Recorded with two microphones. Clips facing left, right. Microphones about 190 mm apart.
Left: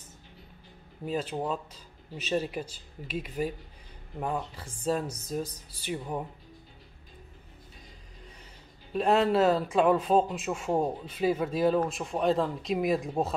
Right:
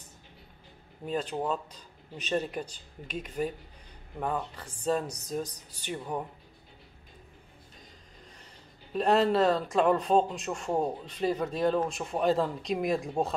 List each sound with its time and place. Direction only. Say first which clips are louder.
1.0 s a man's voice: even; 5° left (ahead or behind)
8.9 s a man's voice: even; centre (ahead or behind)